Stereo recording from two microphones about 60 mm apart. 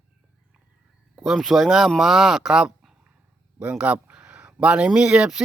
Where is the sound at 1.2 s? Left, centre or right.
Centre.